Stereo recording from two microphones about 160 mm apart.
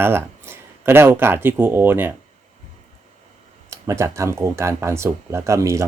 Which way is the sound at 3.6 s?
20° right (ahead or behind).